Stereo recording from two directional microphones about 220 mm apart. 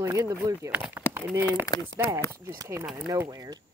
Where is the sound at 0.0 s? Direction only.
15° right (ahead or behind).